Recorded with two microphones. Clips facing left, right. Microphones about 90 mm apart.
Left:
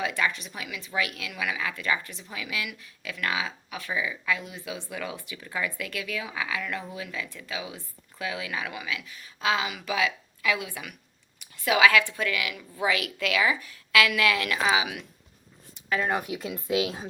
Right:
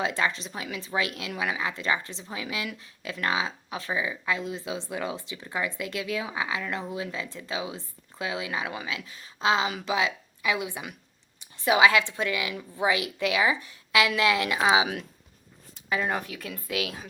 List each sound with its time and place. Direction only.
0.0 s a woman's voice: 25° right (ahead or behind)
15.9 s speech: centre (ahead or behind)
16.2 s speech: 20° left (ahead or behind)